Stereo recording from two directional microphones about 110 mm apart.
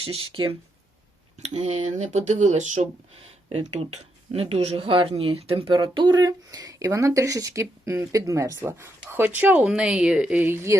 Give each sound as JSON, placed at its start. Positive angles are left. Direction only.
{"t": 0.0, "sound": "speech", "side_deg": -55}
{"t": 1.4, "sound": "speech", "side_deg": -75}
{"t": 10.4, "sound": "speech", "side_deg": -25}